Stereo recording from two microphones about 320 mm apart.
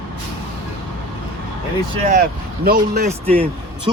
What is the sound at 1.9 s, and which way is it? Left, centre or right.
Speech, right.